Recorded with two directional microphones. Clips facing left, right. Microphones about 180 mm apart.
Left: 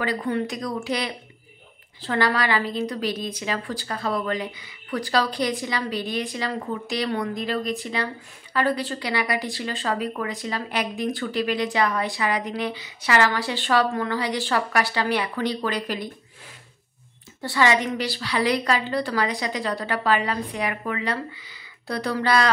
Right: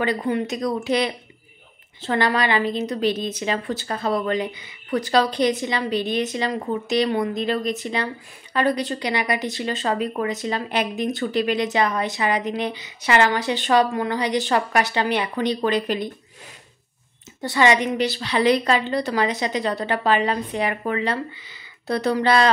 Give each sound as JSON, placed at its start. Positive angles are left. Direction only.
{"t": 0.0, "sound": "speech", "side_deg": -20}
{"t": 17.4, "sound": "speech", "side_deg": -20}